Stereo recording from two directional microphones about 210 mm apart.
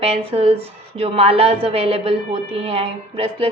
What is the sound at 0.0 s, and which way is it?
A woman's voice, 30° right (ahead or behind).